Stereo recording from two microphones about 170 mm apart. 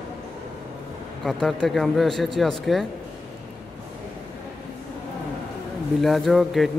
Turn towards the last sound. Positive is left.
turn(degrees=0)  # may be behind; listen again after turning